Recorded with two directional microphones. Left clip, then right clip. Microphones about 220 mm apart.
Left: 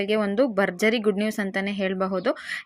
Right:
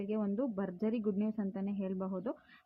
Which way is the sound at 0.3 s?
30° left (ahead or behind).